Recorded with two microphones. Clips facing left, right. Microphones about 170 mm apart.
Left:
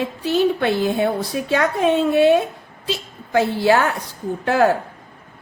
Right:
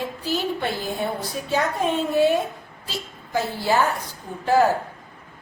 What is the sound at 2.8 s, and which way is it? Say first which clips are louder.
A woman's voice: left 7 dB; 90° left.